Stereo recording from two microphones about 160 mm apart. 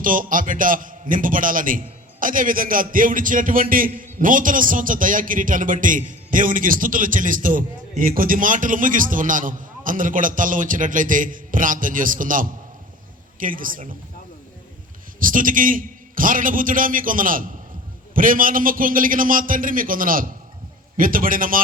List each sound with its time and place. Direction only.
0.0 s a man's voice: 55° right (ahead or behind)
15.2 s a man's voice: 60° right (ahead or behind)